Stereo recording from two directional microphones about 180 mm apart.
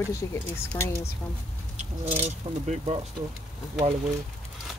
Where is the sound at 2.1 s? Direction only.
40° right (ahead or behind).